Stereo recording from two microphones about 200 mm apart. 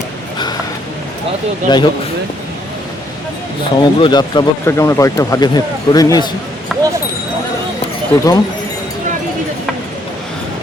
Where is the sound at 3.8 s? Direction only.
20° left (ahead or behind).